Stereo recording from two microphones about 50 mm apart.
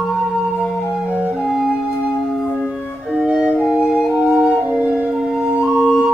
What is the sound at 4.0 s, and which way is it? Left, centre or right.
Music, centre.